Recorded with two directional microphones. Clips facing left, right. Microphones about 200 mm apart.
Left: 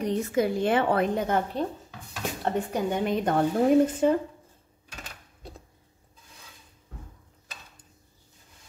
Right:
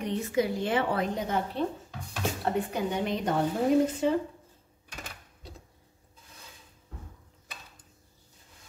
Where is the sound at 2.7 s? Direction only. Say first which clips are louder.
Left 3 dB; 50° left (ahead or behind).